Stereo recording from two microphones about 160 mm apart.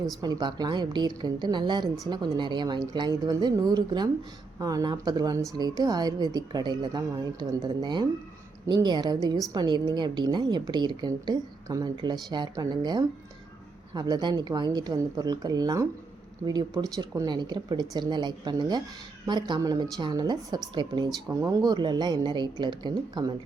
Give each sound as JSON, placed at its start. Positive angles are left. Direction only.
{"t": 0.0, "sound": "a woman's voice", "side_deg": -25}